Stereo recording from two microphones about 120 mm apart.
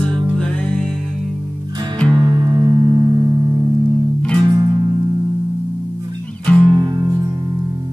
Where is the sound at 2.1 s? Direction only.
35° right (ahead or behind).